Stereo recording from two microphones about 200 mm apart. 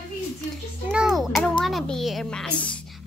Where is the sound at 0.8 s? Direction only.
Centre (ahead or behind).